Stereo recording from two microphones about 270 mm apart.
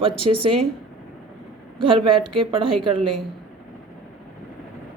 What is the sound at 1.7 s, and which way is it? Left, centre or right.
Speech, centre.